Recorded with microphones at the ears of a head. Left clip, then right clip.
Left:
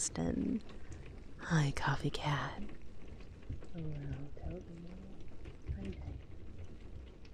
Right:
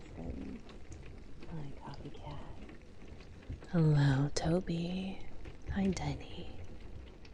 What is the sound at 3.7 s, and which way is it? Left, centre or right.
Speech, right.